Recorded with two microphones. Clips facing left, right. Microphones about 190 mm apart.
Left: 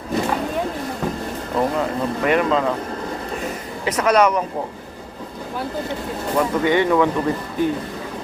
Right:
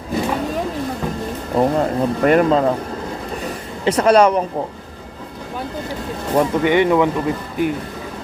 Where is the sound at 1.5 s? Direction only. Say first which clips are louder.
Right 4 dB; 40° right (ahead or behind).